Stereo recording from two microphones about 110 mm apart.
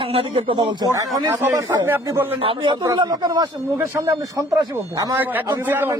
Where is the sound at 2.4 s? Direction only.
50° right (ahead or behind).